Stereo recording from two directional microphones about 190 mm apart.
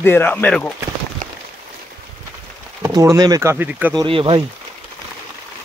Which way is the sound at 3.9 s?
25° right (ahead or behind).